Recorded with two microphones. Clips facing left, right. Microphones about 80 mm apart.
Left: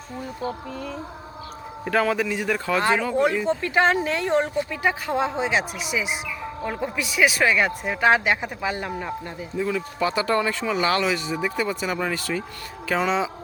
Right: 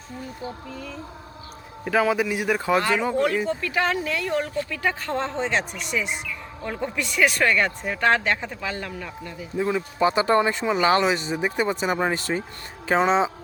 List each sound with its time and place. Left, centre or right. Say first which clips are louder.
0.4 s speech: left 6 dB; left
1.8 s speech: right 1 dB; centre
3.6 s speech: left 4 dB; left
4.5 s speech: left 2 dB; centre
9.0 s speech: left 4 dB; left
9.6 s speech: right 2 dB; right